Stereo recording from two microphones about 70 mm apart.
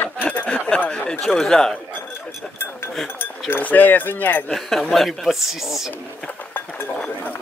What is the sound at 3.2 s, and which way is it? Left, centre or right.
Speech, left.